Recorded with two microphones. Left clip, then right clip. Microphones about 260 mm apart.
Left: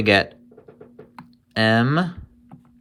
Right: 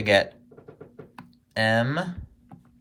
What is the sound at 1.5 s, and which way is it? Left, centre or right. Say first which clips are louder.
Speech: left 4 dB; centre.